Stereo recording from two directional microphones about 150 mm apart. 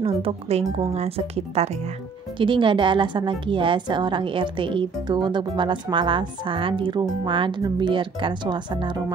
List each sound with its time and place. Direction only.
0.0 s a woman's voice: 40° right (ahead or behind)